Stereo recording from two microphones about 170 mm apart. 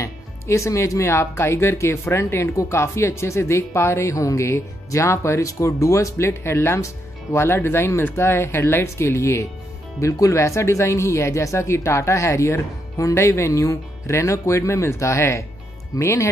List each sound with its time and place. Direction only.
0.0 s speech: 15° left (ahead or behind)